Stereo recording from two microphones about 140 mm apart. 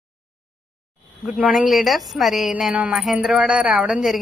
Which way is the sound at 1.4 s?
5° right (ahead or behind).